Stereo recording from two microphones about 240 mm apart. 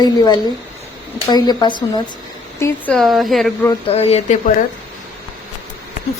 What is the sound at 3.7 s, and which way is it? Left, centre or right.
Speech, left.